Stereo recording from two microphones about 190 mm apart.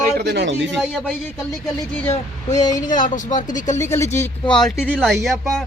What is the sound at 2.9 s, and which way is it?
Speech, 45° left (ahead or behind).